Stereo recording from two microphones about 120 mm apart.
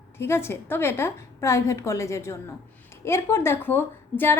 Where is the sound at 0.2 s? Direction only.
20° left (ahead or behind).